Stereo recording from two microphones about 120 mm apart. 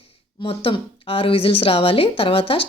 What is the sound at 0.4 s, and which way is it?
Speech, 50° left (ahead or behind).